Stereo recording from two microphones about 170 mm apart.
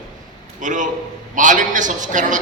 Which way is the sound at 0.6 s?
50° right (ahead or behind).